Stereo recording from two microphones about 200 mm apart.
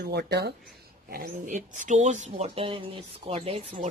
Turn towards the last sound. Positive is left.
turn(degrees=-30)  # may be behind; listen again after turning